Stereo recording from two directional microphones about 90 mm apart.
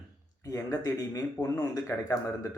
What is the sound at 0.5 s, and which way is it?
A man's voice, 40° left (ahead or behind).